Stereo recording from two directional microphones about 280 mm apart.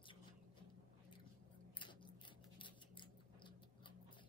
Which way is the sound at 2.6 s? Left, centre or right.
Centre.